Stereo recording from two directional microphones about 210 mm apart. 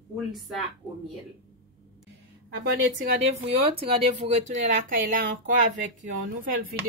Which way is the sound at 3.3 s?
30° right (ahead or behind).